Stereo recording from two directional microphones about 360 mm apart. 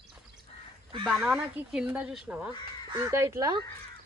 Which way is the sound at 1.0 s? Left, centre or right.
Centre.